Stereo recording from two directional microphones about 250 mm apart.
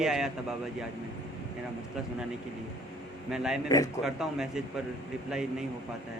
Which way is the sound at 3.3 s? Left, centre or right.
Centre.